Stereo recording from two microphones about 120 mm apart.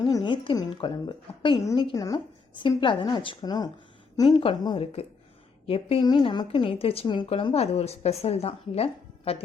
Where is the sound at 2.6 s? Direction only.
45° left (ahead or behind).